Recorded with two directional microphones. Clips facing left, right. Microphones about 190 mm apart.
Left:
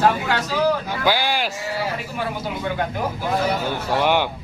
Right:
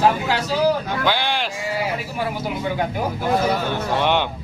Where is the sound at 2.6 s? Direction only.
10° right (ahead or behind).